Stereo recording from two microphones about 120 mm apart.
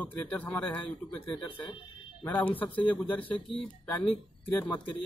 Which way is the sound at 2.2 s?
15° left (ahead or behind).